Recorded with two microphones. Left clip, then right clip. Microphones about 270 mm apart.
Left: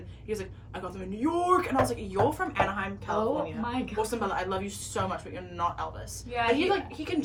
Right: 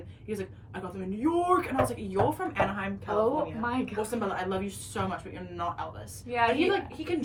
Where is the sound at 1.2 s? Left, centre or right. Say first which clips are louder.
Left 1 dB; centre.